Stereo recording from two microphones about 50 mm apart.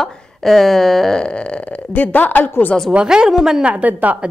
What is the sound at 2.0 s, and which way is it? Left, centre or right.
Speech, left.